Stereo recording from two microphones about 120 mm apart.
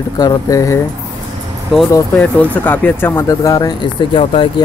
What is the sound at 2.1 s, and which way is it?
Speech, 10° left (ahead or behind).